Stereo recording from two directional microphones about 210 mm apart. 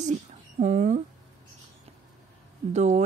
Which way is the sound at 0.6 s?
35° right (ahead or behind).